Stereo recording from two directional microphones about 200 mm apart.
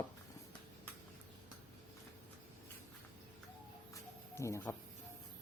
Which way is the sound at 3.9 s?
15° left (ahead or behind).